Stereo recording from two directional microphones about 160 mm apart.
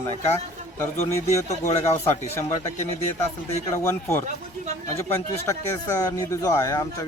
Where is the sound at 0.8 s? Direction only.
15° left (ahead or behind).